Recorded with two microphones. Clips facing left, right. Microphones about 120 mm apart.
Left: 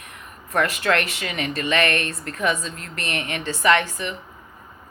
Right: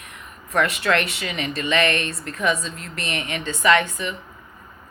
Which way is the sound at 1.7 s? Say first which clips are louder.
Right 1 dB; 30° right (ahead or behind).